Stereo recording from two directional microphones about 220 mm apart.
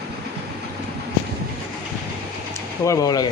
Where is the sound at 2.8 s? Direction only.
15° left (ahead or behind).